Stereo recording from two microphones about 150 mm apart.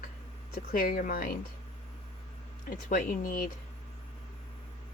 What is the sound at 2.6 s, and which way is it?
Speech, 65° left (ahead or behind).